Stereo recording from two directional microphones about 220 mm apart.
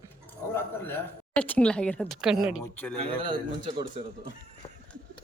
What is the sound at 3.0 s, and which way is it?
Speech, 25° right (ahead or behind).